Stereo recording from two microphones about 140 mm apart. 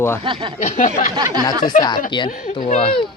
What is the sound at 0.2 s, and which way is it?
Speech, 35° right (ahead or behind).